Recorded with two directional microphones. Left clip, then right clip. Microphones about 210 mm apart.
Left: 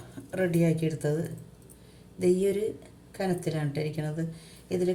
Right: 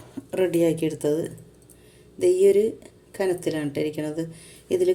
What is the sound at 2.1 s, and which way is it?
Speech, 35° right (ahead or behind).